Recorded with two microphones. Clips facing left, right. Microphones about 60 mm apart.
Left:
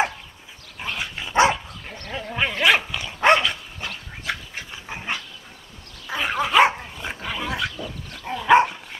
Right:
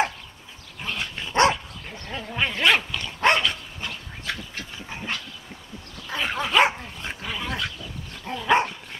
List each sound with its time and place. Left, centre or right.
0.8 s dog: centre